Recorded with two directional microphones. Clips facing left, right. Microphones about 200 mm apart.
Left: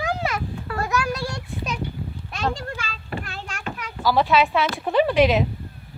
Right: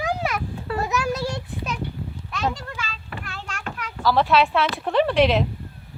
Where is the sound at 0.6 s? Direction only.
25° right (ahead or behind).